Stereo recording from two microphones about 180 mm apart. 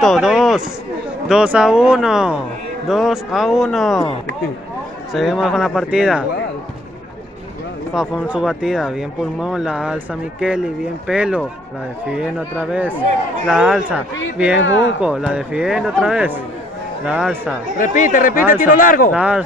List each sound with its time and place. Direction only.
0.0 s speech: centre (ahead or behind)
5.1 s speech: centre (ahead or behind)
7.9 s speech: 5° right (ahead or behind)
11.1 s speech: 5° right (ahead or behind)
14.6 s speech: 90° left
15.0 s speech: 5° right (ahead or behind)
17.7 s speech: 45° left (ahead or behind)
19.1 s speech: 5° right (ahead or behind)